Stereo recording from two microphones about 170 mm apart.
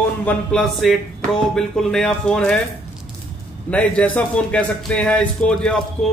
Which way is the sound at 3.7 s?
10° left (ahead or behind).